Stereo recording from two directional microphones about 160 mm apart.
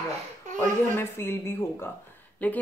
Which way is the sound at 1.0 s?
15° left (ahead or behind).